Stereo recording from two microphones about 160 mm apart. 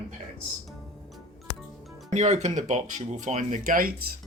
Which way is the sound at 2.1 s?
45° right (ahead or behind).